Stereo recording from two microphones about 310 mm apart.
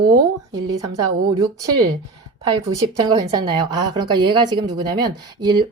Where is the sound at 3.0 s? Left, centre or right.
Centre.